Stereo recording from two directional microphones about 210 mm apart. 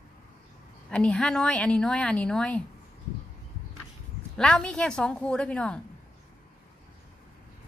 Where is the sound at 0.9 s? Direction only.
5° left (ahead or behind).